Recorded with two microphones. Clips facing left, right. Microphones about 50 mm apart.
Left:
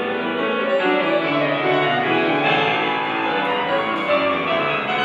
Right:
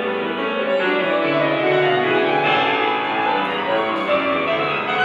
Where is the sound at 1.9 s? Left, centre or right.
Left.